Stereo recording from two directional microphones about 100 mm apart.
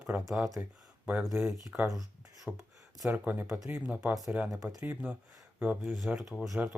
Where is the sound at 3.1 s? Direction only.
20° right (ahead or behind).